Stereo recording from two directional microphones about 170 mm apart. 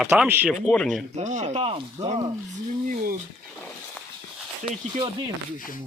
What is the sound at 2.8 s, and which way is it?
Speech, 60° right (ahead or behind).